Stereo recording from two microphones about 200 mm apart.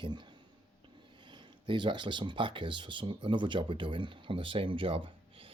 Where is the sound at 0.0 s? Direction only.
25° right (ahead or behind).